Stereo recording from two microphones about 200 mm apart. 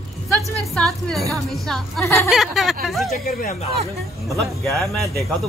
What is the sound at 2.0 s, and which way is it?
Speech, 15° left (ahead or behind).